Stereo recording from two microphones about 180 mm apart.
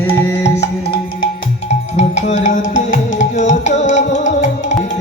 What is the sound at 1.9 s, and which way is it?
Music, 40° left (ahead or behind).